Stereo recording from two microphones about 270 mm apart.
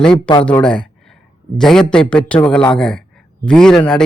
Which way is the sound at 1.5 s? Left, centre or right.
Centre.